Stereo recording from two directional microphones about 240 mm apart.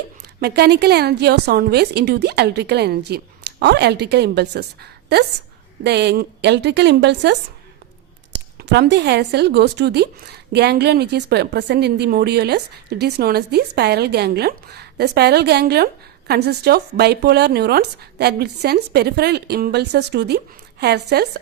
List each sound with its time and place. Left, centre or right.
0.3 s speech: right